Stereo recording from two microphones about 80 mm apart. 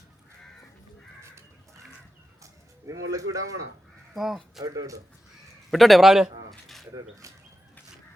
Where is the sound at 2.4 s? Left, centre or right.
Right.